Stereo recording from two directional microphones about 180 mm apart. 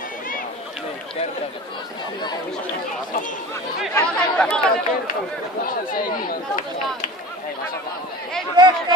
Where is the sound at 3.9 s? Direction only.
10° left (ahead or behind).